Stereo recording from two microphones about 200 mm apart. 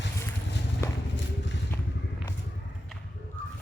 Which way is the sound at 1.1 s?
60° left (ahead or behind).